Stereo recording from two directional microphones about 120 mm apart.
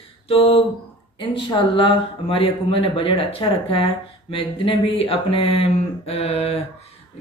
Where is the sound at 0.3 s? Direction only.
50° left (ahead or behind).